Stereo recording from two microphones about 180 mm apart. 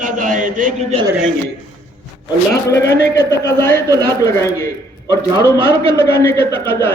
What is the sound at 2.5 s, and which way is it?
Speech, 70° left (ahead or behind).